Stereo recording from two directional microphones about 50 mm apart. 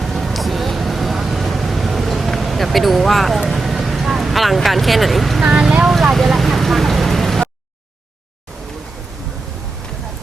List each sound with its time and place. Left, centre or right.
0.0 s vehicle: centre
5.4 s speech: centre
5.9 s vehicle: centre